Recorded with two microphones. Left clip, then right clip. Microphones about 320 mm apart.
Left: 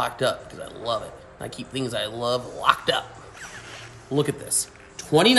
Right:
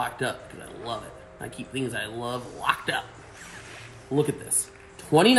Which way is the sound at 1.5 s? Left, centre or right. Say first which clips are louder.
Left 2 dB; left.